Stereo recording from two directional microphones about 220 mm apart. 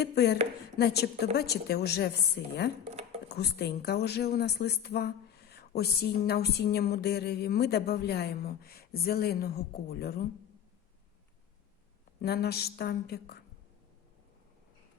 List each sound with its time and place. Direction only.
0.0 s a woman's voice: 50° left (ahead or behind)
12.2 s a woman's voice: 45° left (ahead or behind)